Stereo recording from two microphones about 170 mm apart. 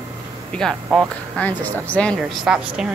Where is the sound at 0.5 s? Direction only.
5° left (ahead or behind).